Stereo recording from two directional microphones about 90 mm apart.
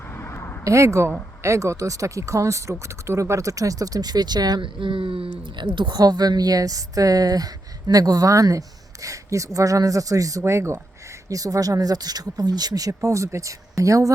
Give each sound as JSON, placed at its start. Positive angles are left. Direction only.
{"t": 0.2, "sound": "a sound", "side_deg": 30}
{"t": 0.6, "sound": "speech", "side_deg": -35}
{"t": 11.3, "sound": "speech", "side_deg": -40}